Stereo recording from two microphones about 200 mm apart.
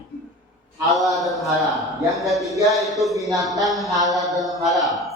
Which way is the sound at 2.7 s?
Centre (ahead or behind).